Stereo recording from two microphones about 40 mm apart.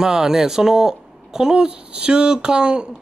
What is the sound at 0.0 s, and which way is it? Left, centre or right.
A man's voice, centre.